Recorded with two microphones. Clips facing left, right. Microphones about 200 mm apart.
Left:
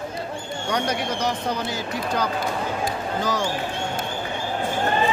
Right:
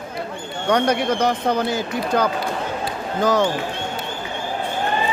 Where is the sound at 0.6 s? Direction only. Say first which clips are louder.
Right 7 dB; 55° right (ahead or behind).